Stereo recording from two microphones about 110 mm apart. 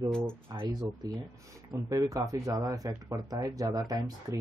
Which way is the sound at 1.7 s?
30° right (ahead or behind).